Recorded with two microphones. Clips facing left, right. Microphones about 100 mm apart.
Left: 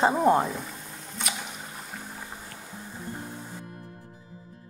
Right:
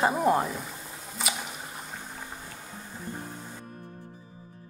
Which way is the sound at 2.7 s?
5° left (ahead or behind).